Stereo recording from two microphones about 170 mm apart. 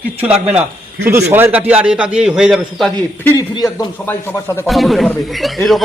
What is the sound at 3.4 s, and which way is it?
Speech, 20° left (ahead or behind).